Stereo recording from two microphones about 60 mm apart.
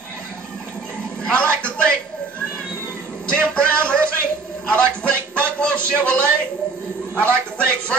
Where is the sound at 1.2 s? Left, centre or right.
Centre.